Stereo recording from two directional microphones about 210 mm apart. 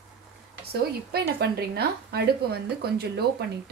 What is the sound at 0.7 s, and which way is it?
A woman's voice, 50° right (ahead or behind).